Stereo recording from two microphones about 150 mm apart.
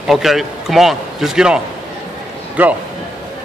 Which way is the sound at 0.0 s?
Centre (ahead or behind).